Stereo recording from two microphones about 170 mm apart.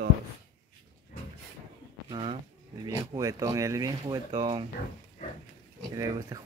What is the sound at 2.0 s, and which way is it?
Speech, 25° right (ahead or behind).